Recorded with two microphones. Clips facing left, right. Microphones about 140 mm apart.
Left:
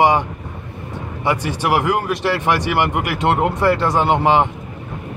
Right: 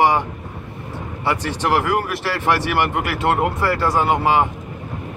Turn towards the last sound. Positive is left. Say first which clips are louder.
# left 2 dB
turn(degrees=25)  # may be behind; listen again after turning